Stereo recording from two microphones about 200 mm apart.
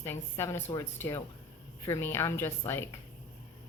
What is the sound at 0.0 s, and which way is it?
A woman's voice, 10° left (ahead or behind).